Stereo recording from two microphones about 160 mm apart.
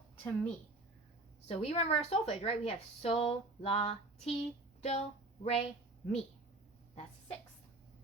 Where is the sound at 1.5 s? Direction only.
40° left (ahead or behind).